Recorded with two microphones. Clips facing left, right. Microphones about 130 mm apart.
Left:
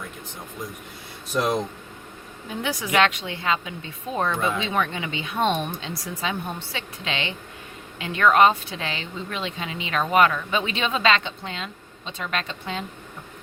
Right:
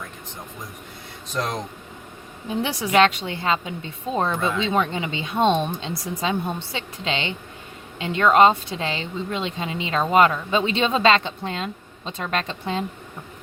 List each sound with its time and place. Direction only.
1.3 s speech: 10° left (ahead or behind)
2.6 s a woman's voice: 30° right (ahead or behind)